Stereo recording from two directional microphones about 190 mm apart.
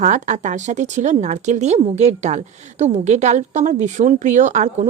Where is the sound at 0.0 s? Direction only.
40° right (ahead or behind).